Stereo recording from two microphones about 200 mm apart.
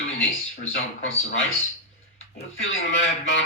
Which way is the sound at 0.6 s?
80° left.